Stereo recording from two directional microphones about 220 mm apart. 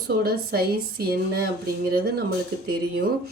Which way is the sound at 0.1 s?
45° right (ahead or behind).